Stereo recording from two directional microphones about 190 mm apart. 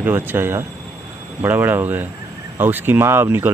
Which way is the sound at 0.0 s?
10° right (ahead or behind).